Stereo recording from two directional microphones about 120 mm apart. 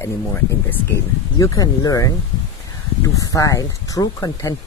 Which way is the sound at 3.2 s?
30° left (ahead or behind).